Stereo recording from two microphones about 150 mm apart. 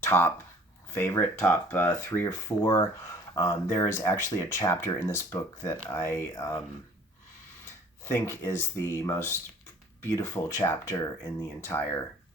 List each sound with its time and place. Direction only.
0.0 s speech: 15° left (ahead or behind)
8.0 s speech: 20° left (ahead or behind)